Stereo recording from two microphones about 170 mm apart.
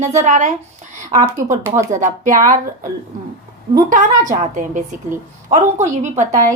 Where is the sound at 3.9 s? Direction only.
50° right (ahead or behind).